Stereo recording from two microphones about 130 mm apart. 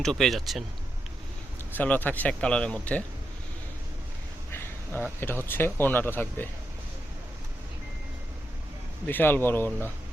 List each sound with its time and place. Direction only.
0.0 s speech: centre (ahead or behind)
1.7 s speech: 15° left (ahead or behind)
4.5 s a sound: 20° left (ahead or behind)
5.2 s speech: 15° left (ahead or behind)
9.0 s speech: 15° left (ahead or behind)